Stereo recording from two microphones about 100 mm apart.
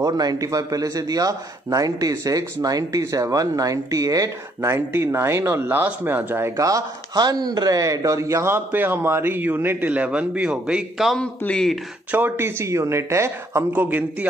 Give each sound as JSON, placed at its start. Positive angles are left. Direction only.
{"t": 0.0, "sound": "a man's voice", "side_deg": -40}
{"t": 11.1, "sound": "a man's voice", "side_deg": 5}
{"t": 12.1, "sound": "speech", "side_deg": -20}
{"t": 13.7, "sound": "a man's voice", "side_deg": -15}